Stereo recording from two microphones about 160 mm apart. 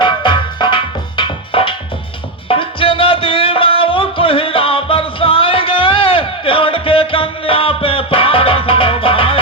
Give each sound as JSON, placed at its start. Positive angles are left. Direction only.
{"t": 0.0, "sound": "music", "side_deg": 30}